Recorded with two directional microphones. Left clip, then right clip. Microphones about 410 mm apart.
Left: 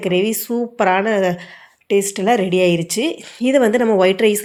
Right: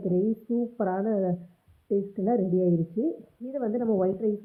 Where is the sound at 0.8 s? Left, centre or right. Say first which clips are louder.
Left 14 dB; centre.